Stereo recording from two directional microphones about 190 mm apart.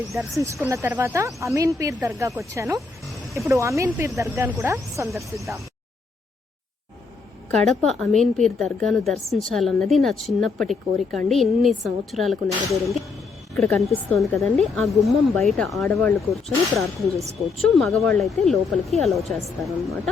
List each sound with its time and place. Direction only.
0.3 s speech: 15° right (ahead or behind)
7.7 s speech: centre (ahead or behind)
13.6 s speech: centre (ahead or behind)